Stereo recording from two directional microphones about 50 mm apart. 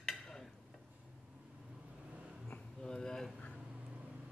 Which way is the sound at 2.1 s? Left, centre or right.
Centre.